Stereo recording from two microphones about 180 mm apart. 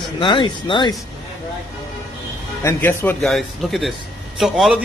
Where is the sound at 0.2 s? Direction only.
25° left (ahead or behind).